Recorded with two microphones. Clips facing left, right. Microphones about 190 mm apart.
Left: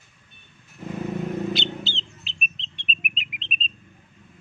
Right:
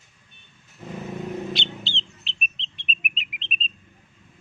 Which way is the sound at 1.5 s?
Centre (ahead or behind).